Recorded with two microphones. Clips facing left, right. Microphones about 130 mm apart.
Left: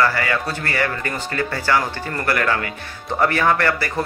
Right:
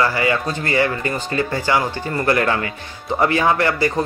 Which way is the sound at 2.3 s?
25° right (ahead or behind).